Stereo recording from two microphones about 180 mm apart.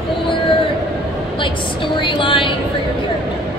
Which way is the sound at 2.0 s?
25° left (ahead or behind).